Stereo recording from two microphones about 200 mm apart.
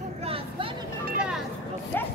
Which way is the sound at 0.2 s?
30° right (ahead or behind).